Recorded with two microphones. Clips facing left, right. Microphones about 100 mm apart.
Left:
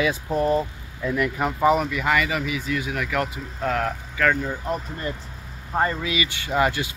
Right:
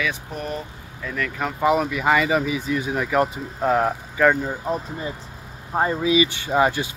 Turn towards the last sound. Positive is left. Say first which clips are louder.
# right 2 dB
turn(degrees=-20)  # may be behind; listen again after turning